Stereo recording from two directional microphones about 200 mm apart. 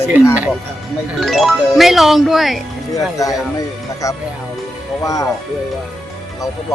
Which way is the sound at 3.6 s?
15° left (ahead or behind).